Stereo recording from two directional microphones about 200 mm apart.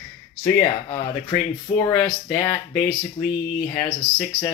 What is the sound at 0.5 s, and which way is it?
Speech, 15° left (ahead or behind).